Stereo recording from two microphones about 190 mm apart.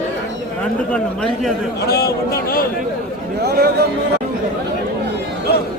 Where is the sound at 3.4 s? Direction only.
60° right (ahead or behind).